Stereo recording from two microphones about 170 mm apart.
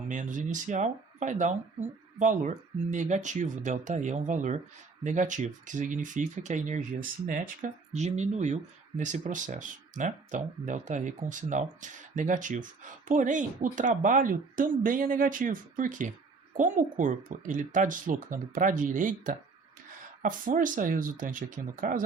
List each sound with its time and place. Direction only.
0.1 s speech: 50° right (ahead or behind)